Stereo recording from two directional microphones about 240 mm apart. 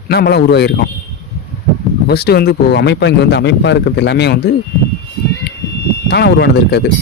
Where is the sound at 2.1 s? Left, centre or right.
Left.